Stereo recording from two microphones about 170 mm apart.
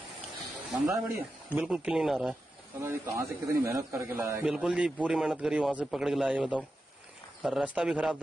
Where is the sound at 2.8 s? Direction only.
15° right (ahead or behind).